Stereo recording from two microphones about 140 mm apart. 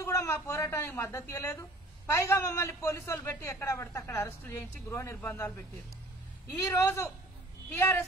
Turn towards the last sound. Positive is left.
turn(degrees=20)  # may be behind; listen again after turning